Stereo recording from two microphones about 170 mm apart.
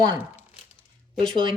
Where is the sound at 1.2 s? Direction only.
30° right (ahead or behind).